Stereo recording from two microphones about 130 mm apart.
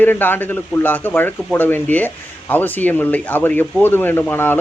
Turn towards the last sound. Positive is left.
turn(degrees=15)  # may be behind; listen again after turning